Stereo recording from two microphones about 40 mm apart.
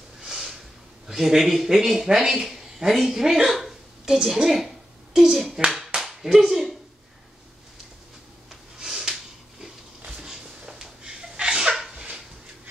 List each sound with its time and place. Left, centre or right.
0.2 s a sound: centre
1.0 s speech: centre
3.4 s hiccup: centre
5.9 s clapping: centre
8.5 s snort: centre
10.0 s sneeze: centre
11.7 s a sound: centre